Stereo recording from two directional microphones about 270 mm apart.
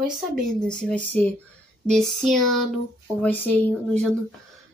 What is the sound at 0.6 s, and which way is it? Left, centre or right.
Speech, centre.